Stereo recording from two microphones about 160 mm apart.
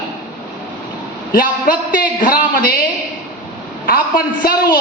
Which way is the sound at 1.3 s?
65° left (ahead or behind).